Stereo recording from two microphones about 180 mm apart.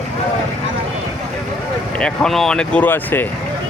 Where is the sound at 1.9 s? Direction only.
5° left (ahead or behind).